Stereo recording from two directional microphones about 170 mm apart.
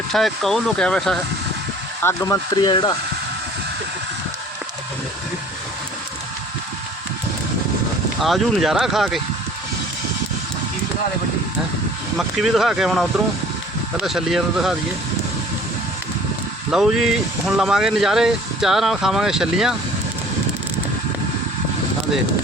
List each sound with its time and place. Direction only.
0.1 s speech: centre (ahead or behind)
2.0 s speech: 15° left (ahead or behind)
8.2 s speech: centre (ahead or behind)
12.1 s speech: centre (ahead or behind)
16.7 s speech: centre (ahead or behind)